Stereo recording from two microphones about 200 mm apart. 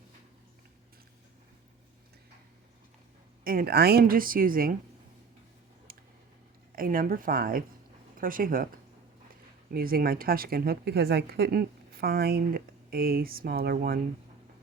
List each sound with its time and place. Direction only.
3.4 s speech: 45° right (ahead or behind)
5.9 s a sound: 45° right (ahead or behind)
6.7 s speech: 45° right (ahead or behind)
9.7 s speech: 45° right (ahead or behind)